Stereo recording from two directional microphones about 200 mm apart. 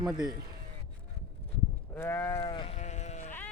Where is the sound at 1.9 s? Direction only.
10° left (ahead or behind).